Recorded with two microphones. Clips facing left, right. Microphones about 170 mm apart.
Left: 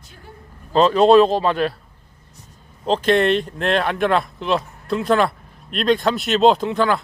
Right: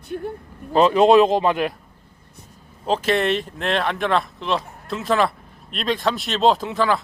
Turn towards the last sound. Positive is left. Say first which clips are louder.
# left 2 dB
turn(degrees=0)  # may be behind; listen again after turning